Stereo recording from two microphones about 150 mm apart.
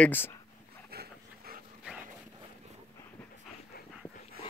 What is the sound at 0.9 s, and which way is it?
Dog, 90° right.